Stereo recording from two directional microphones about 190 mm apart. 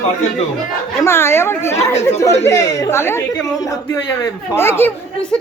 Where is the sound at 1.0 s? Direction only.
15° left (ahead or behind).